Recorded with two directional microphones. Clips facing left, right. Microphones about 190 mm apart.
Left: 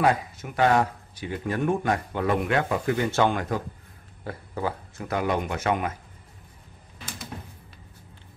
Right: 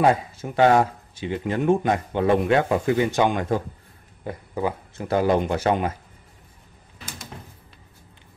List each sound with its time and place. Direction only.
0.0 s speech: 25° right (ahead or behind)
5.0 s speech: 30° right (ahead or behind)